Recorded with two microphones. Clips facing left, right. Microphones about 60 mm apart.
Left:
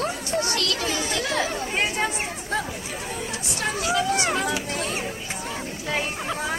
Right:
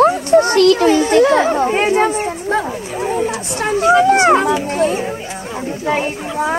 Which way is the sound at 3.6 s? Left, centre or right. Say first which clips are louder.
Right 12 dB; right.